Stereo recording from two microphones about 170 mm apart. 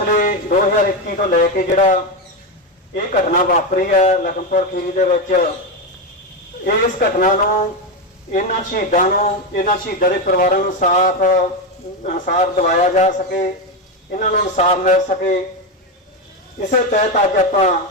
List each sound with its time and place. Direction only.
0.1 s speech: 50° left (ahead or behind)
6.7 s speech: 50° left (ahead or behind)
16.6 s speech: 45° left (ahead or behind)